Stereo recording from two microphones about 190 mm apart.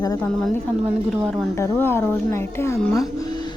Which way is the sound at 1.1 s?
Centre (ahead or behind).